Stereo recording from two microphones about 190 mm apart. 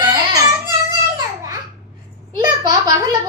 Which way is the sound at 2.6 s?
20° right (ahead or behind).